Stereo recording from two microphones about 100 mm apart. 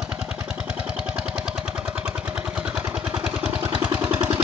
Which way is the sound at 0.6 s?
10° right (ahead or behind).